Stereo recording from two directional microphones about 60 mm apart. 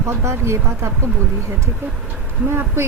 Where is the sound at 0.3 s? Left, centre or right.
Right.